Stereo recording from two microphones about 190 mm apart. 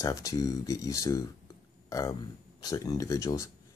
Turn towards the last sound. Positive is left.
turn(degrees=15)  # may be behind; listen again after turning